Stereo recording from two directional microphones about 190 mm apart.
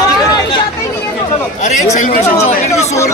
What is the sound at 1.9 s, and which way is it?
Speech, 35° left (ahead or behind).